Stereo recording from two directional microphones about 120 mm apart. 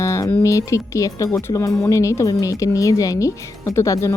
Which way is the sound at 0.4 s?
25° left (ahead or behind).